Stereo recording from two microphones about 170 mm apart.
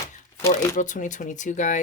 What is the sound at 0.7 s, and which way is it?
Music, 45° left (ahead or behind).